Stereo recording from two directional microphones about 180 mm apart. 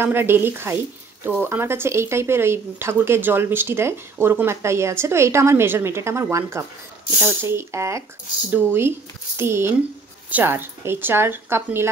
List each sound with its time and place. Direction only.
0.0 s speech: 10° right (ahead or behind)
9.4 s speech: 15° right (ahead or behind)